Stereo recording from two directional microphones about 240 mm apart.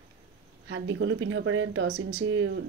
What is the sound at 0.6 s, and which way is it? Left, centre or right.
Speech, right.